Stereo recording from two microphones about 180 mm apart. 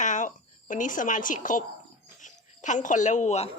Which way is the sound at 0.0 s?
45° left (ahead or behind).